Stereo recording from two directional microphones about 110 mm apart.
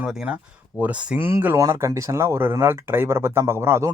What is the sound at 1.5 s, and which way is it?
Speech, 30° right (ahead or behind).